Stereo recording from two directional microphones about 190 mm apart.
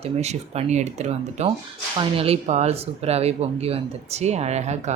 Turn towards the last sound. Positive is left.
turn(degrees=-35)  # may be behind; listen again after turning